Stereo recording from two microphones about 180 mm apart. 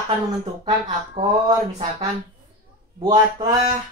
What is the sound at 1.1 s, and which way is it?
Speech, 30° right (ahead or behind).